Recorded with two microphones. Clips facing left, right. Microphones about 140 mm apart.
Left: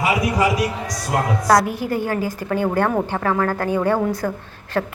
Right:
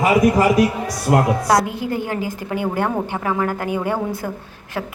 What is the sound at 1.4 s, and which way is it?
A woman's voice, 20° right (ahead or behind).